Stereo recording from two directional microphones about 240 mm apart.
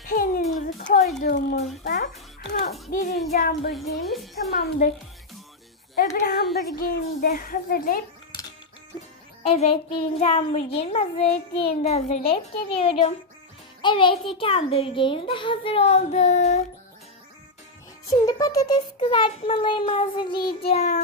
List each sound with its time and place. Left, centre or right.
0.0 s a sound: left
1.2 s speech: left
4.1 s a woman's voice: centre
4.5 s speech: left
6.1 s speech: left
9.4 s a child's voice: left
18.1 s a child's voice: centre